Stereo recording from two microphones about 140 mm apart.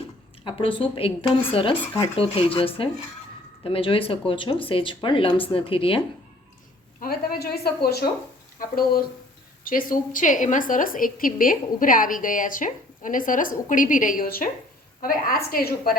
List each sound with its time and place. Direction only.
0.4 s speech: 40° left (ahead or behind)
7.0 s a woman's voice: 90° left